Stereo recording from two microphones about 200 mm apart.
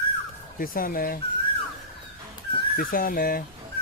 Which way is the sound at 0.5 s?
45° left (ahead or behind).